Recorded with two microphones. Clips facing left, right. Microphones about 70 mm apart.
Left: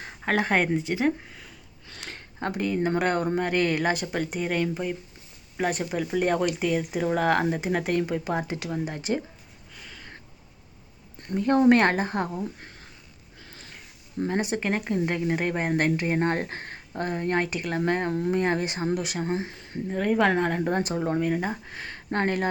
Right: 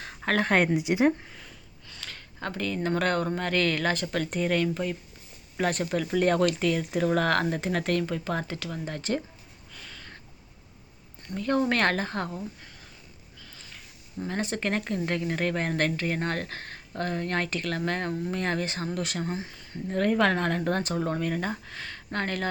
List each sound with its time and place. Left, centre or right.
0.3 s speech: centre
0.8 s speech: centre
1.2 s speech: centre
2.0 s a sound: left
2.5 s speech: centre
9.7 s a sound: centre
11.3 s speech: left
12.5 s a sound: left
14.3 s speech: centre
19.2 s speech: left
19.9 s speech: centre; by 22.4 s left